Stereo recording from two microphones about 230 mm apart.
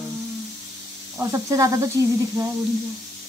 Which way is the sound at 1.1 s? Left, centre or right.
Centre.